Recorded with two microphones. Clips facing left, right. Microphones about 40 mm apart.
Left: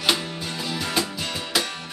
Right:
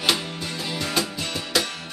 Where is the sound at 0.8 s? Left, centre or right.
Centre.